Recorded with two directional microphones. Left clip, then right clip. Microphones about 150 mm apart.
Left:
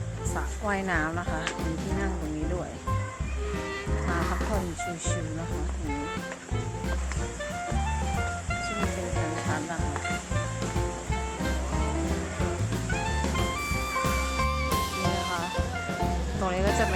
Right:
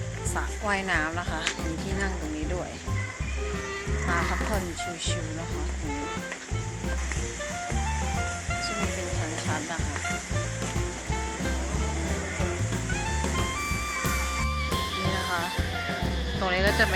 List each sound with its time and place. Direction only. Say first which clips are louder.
0.7 s speech: right 1 dB; 20° left (ahead or behind)
12.9 s music: left 1 dB; centre (ahead or behind)
16.5 s vehicle: right 3 dB; 5° left (ahead or behind)